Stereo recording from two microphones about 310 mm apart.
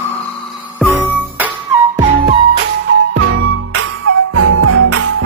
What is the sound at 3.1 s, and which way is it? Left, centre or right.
Music, right.